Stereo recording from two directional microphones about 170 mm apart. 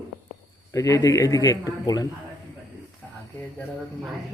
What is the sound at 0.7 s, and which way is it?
Speech, 20° left (ahead or behind).